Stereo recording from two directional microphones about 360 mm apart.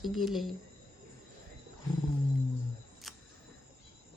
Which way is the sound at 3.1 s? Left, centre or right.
Centre.